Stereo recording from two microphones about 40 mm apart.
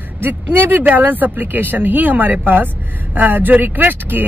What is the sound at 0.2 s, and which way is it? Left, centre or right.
Speech, right.